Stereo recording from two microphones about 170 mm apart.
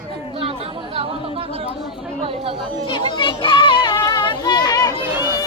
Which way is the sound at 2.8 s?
30° left (ahead or behind).